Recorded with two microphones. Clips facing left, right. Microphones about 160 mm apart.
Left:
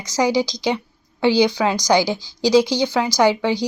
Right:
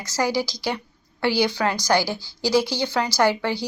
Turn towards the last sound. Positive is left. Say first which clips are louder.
# left 4 dB
turn(degrees=15)  # may be behind; listen again after turning